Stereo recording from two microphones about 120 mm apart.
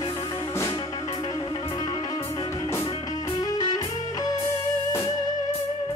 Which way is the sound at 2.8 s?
35° left (ahead or behind).